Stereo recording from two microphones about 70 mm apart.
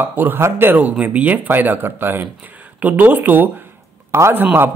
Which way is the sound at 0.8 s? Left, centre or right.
Centre.